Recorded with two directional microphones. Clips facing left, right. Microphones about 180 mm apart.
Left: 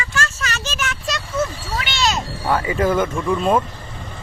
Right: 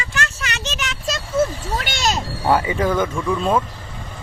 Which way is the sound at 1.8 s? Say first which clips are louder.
Left 2 dB; 45° right (ahead or behind).